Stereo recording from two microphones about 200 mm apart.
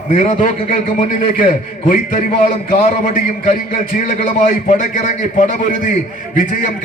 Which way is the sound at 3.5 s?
40° left (ahead or behind).